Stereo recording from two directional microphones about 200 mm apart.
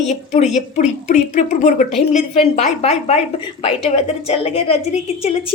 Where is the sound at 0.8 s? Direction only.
35° left (ahead or behind).